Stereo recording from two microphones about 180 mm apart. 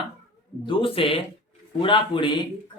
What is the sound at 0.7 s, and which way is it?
A man's voice, 30° left (ahead or behind).